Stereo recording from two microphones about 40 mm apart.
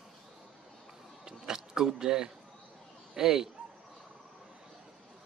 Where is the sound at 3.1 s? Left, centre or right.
Centre.